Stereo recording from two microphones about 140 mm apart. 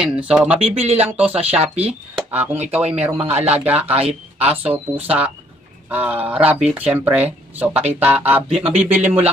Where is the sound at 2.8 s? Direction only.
50° right (ahead or behind).